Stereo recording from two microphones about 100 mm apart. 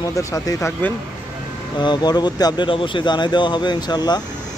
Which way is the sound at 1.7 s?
50° left (ahead or behind).